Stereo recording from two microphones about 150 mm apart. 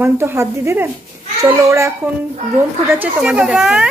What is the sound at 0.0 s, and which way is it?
A child's voice, 15° right (ahead or behind).